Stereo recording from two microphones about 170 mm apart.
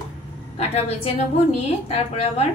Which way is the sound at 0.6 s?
35° left (ahead or behind).